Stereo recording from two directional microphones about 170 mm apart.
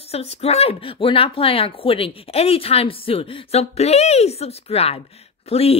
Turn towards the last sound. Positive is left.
turn(degrees=35)  # may be behind; listen again after turning